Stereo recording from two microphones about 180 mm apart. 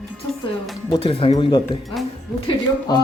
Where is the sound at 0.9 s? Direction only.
30° left (ahead or behind).